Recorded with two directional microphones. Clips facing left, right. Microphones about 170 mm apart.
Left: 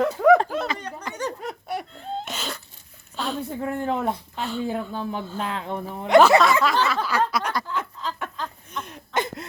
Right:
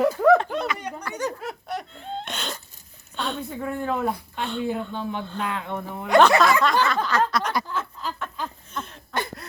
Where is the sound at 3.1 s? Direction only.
Centre (ahead or behind).